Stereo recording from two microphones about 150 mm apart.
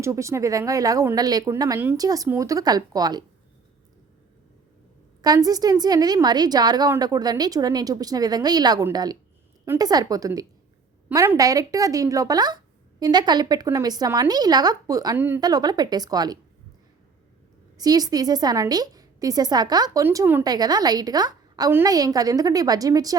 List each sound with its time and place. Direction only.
0.0 s a woman's voice: 20° right (ahead or behind)
5.2 s a woman's voice: 25° right (ahead or behind)
17.7 s a woman's voice: 25° right (ahead or behind)
20.4 s a woman's voice: 25° right (ahead or behind)